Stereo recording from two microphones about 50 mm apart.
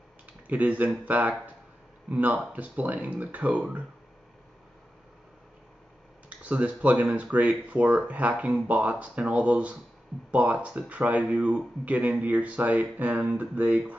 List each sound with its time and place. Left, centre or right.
0.5 s speech: right
6.2 s speech: right